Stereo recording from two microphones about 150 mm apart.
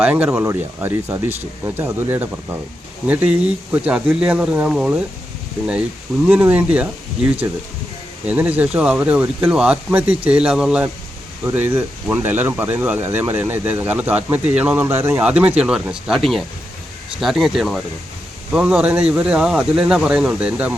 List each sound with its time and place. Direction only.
0.0 s speech: 10° right (ahead or behind)
6.2 s speech: 10° right (ahead or behind)